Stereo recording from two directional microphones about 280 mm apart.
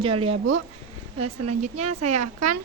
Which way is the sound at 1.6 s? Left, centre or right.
Right.